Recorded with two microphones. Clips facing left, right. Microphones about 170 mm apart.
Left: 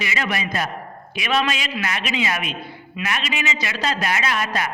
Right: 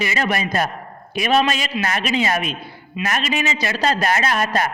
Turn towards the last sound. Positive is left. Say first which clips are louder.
# right 4 dB
turn(degrees=-40)  # may be behind; listen again after turning